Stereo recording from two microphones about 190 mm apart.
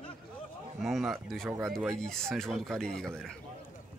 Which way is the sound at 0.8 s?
Centre (ahead or behind).